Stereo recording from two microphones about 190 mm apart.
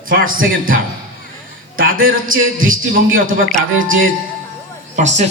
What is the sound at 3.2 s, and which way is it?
Speech, 45° right (ahead or behind).